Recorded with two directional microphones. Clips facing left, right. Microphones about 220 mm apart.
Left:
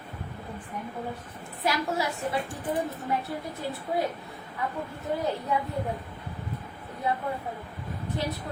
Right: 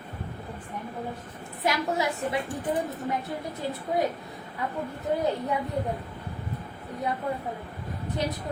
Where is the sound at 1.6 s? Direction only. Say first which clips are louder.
Right 1 dB; 20° right (ahead or behind).